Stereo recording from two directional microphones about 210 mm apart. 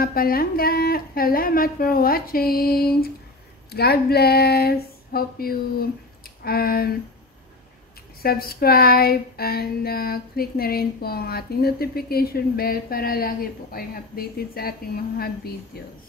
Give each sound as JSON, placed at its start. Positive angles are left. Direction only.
{"t": 0.0, "sound": "speech", "side_deg": 45}
{"t": 3.7, "sound": "a sound", "side_deg": 50}
{"t": 8.2, "sound": "speech", "side_deg": 45}